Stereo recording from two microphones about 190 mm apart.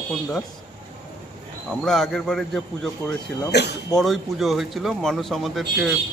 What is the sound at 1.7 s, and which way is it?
Speech, centre (ahead or behind).